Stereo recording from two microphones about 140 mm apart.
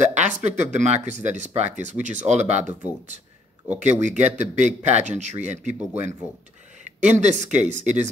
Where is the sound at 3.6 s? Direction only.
55° right (ahead or behind).